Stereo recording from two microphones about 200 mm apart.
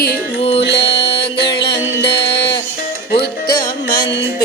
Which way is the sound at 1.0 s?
55° left (ahead or behind).